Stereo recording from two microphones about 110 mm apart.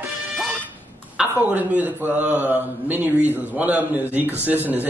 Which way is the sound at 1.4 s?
15° right (ahead or behind).